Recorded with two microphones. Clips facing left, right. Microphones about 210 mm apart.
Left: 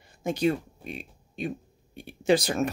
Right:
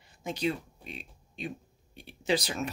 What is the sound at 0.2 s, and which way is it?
Speech, 50° left (ahead or behind).